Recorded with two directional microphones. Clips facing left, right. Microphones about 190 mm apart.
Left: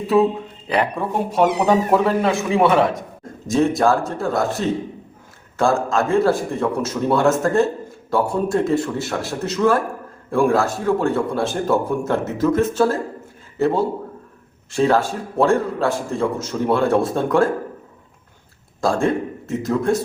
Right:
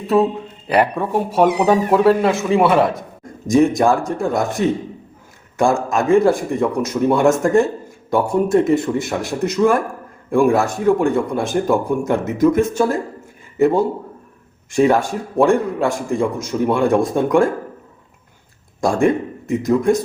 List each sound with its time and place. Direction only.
0.7 s a man's voice: 5° right (ahead or behind)
3.4 s a man's voice: 15° right (ahead or behind)
18.8 s speech: 15° right (ahead or behind)